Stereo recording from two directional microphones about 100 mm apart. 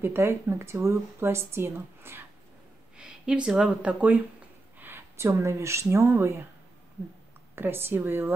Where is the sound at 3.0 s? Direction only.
10° right (ahead or behind); by 6.4 s 30° right (ahead or behind).